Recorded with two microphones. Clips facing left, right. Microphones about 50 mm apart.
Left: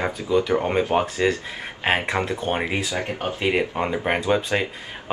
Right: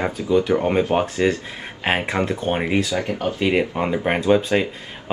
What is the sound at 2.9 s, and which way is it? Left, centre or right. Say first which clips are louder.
Speech: right 3 dB; left.